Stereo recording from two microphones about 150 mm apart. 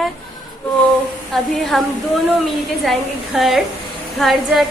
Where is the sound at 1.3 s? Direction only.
5° left (ahead or behind).